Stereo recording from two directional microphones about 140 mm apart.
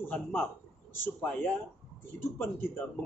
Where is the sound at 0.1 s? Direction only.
10° left (ahead or behind).